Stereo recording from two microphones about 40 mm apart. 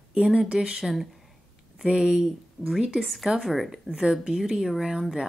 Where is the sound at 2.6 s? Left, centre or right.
Centre.